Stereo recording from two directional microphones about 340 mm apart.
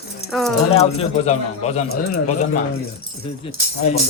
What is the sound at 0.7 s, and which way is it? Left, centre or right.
Speech, centre.